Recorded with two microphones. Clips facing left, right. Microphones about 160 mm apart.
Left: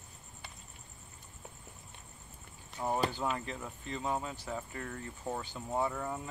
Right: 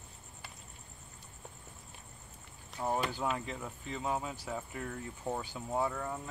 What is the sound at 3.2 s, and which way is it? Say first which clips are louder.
Speech: even; 5° right (ahead or behind).